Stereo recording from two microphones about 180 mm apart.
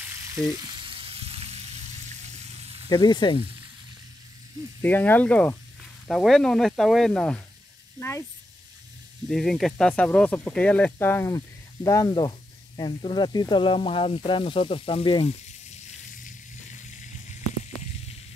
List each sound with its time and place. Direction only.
0.0 s frying: 15° right (ahead or behind); by 2.2 s 40° right (ahead or behind)
2.9 s speech: 25° left (ahead or behind)
4.8 s speech: 10° left (ahead or behind)
9.3 s speech: centre (ahead or behind); by 16.3 s 40° left (ahead or behind)